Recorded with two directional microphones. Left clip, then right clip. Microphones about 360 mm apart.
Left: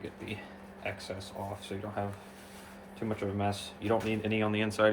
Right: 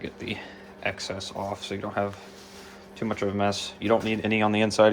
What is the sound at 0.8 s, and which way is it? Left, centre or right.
Speech, right.